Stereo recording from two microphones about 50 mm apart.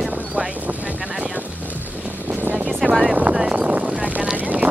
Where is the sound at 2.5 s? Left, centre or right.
Right.